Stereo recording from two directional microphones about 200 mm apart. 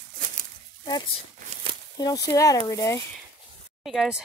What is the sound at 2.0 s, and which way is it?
Speech, 20° left (ahead or behind).